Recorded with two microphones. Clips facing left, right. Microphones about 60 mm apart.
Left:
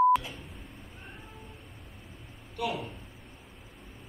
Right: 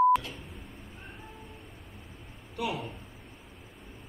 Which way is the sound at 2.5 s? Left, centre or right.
Centre.